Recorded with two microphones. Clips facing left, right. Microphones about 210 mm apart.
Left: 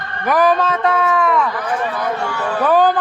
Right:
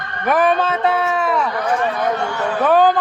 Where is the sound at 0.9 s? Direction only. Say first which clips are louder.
Left 2 dB; 25° right (ahead or behind).